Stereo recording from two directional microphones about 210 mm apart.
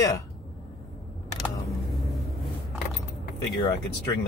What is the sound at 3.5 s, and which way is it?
Speech, 20° left (ahead or behind).